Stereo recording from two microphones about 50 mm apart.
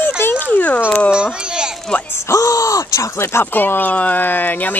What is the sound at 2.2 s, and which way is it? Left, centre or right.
Speech, left.